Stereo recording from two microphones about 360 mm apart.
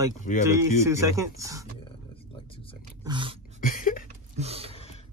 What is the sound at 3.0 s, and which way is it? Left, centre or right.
Dog, centre.